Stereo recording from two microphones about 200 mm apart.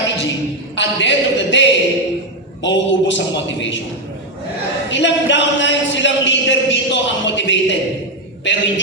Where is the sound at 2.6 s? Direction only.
65° left (ahead or behind).